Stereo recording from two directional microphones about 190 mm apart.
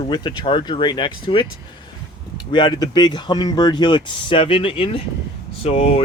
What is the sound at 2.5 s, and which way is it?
Speech, 25° left (ahead or behind).